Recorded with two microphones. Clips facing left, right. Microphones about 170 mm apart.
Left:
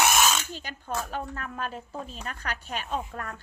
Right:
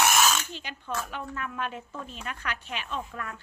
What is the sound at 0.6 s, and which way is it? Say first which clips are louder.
Speech: left 1 dB; 40° left (ahead or behind).